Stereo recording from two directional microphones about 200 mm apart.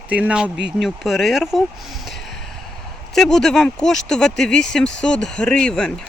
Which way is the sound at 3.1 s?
Centre (ahead or behind).